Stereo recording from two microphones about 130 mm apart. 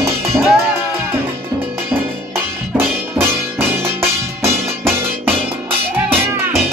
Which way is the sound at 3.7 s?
20° right (ahead or behind).